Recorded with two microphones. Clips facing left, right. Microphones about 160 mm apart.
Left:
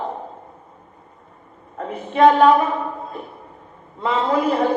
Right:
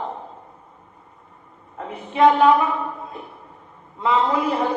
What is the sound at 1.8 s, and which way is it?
A man's voice, 45° left (ahead or behind).